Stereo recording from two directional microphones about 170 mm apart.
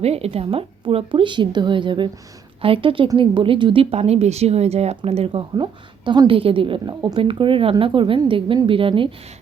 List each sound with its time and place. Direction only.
0.0 s a woman's voice: 35° right (ahead or behind)